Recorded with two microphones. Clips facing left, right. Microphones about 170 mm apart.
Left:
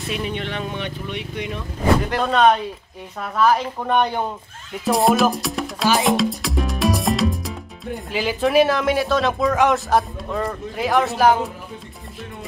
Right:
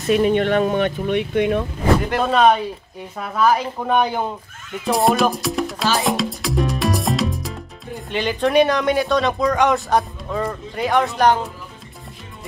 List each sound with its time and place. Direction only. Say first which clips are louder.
0.1 s speech: right 11 dB; 50° right (ahead or behind)
2.0 s speech: right 2 dB; centre (ahead or behind)
4.8 s music: even; centre (ahead or behind)